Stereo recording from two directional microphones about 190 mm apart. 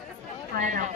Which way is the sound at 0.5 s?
45° right (ahead or behind).